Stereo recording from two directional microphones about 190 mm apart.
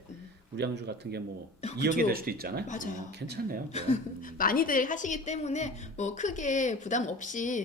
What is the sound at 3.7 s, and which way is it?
Speech, 35° left (ahead or behind).